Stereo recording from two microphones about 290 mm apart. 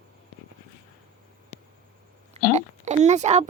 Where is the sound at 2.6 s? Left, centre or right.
Right.